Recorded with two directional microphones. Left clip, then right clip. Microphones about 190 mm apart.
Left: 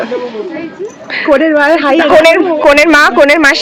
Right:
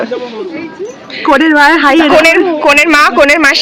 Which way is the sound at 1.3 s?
70° right (ahead or behind).